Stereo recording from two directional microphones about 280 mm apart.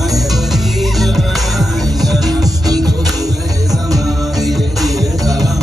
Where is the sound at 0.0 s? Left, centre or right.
Centre.